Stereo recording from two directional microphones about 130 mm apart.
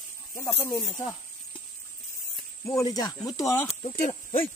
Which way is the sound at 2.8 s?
30° left (ahead or behind).